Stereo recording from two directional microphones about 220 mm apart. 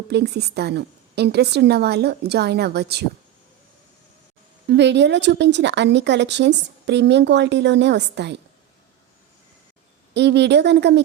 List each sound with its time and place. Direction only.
0.1 s speech: 50° right (ahead or behind)
4.7 s speech: 55° right (ahead or behind)
10.2 s speech: 50° right (ahead or behind)